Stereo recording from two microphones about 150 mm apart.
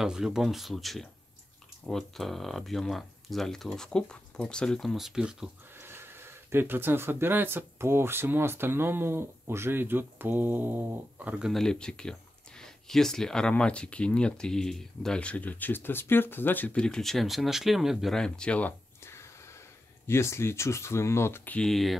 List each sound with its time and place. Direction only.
0.0 s speech: 5° right (ahead or behind)
5.8 s speech: 15° right (ahead or behind); by 21.9 s centre (ahead or behind)